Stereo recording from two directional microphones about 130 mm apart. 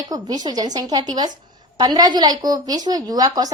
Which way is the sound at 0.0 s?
30° right (ahead or behind).